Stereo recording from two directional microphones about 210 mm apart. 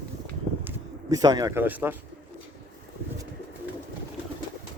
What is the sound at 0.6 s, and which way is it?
Speech, 15° right (ahead or behind).